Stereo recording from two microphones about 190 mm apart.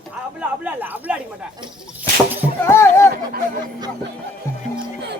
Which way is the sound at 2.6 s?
15° left (ahead or behind).